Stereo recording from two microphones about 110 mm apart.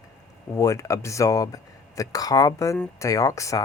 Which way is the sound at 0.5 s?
30° left (ahead or behind).